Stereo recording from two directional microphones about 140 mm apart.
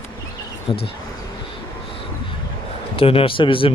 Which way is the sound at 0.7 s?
40° left (ahead or behind).